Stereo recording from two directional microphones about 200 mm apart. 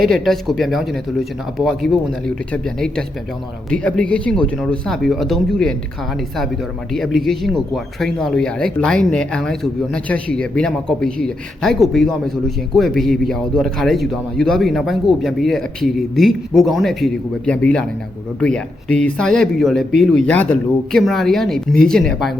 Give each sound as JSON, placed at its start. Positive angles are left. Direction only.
{"t": 0.1, "sound": "speech", "side_deg": 0}
{"t": 6.9, "sound": "speech", "side_deg": 0}